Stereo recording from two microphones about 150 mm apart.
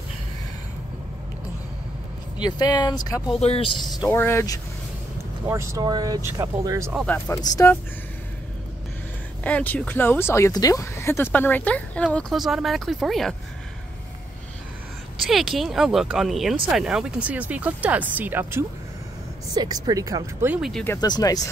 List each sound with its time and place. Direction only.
2.4 s speech: 30° left (ahead or behind)
3.4 s speech: 40° left (ahead or behind)
3.7 s speech: centre (ahead or behind)
4.1 s speech: 15° left (ahead or behind)
5.5 s speech: 20° right (ahead or behind)
7.2 s speech: 20° left (ahead or behind)
9.4 s speech: 10° left (ahead or behind)
15.2 s speech: centre (ahead or behind)
19.5 s speech: 25° right (ahead or behind)
20.4 s speech: 10° right (ahead or behind)
20.7 s speech: 15° left (ahead or behind)
21.0 s speech: 25° left (ahead or behind)